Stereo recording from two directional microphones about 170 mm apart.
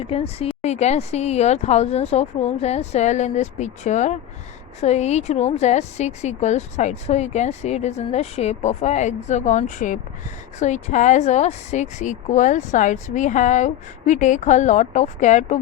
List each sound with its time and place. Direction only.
0.0 s a woman's voice: 35° left (ahead or behind)